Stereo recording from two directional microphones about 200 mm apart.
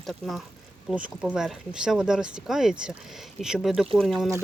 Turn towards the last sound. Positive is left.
turn(degrees=0)  # may be behind; listen again after turning